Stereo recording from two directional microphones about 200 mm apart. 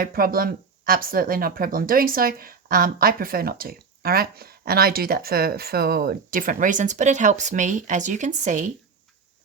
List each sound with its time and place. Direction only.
0.0 s speech: 45° right (ahead or behind)